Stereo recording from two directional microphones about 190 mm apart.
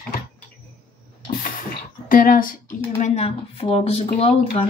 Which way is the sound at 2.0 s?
50° left (ahead or behind).